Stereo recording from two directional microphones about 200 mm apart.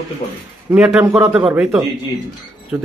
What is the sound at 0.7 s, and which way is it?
Speech, 5° right (ahead or behind).